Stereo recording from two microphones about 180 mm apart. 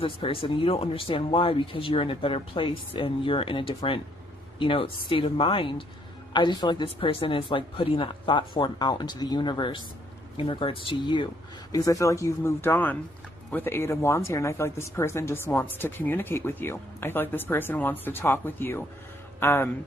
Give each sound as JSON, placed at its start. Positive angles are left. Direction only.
{"t": 0.0, "sound": "speech", "side_deg": 30}